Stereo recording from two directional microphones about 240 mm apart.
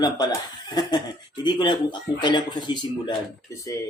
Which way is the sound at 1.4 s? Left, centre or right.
Centre.